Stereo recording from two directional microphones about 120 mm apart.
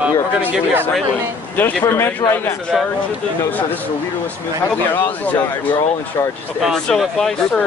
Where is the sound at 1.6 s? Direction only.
15° left (ahead or behind).